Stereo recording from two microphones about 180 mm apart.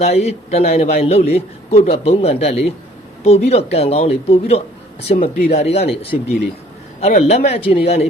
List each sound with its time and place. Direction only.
0.0 s speech: 35° left (ahead or behind)